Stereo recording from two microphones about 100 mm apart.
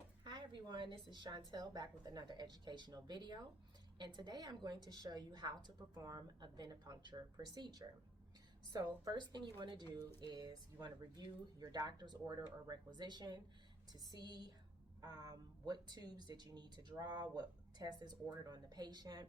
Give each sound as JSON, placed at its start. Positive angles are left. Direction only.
{"t": 0.3, "sound": "a woman's voice", "side_deg": -50}